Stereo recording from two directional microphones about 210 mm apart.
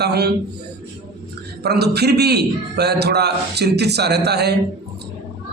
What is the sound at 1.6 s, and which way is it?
Speech, 50° right (ahead or behind).